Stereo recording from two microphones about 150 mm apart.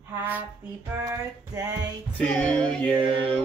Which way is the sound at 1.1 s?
25° right (ahead or behind).